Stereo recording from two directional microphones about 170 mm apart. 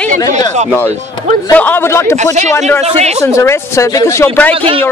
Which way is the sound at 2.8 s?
40° right (ahead or behind).